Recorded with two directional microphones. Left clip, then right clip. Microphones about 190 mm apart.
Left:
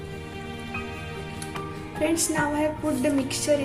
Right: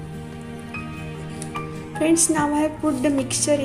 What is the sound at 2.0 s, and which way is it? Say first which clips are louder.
A woman's voice: right 5 dB; 30° right (ahead or behind).